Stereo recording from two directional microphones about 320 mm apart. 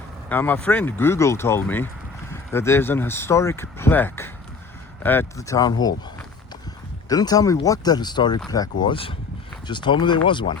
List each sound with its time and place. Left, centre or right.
0.3 s speech: centre
7.1 s speech: centre